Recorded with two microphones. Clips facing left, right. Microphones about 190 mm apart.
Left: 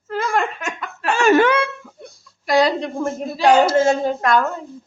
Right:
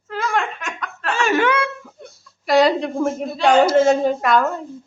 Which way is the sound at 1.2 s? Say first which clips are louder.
Left 4 dB; 40° left (ahead or behind).